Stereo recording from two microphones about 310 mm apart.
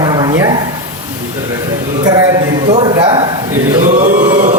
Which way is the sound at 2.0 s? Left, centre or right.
Centre.